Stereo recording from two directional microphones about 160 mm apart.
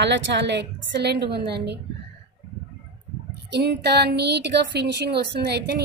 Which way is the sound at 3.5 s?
90° right.